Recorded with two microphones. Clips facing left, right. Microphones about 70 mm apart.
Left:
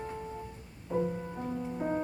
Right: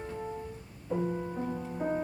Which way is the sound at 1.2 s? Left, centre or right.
Centre.